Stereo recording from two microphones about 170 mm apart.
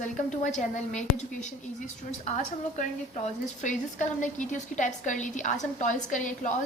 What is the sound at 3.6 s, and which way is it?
A woman's voice, 45° left (ahead or behind).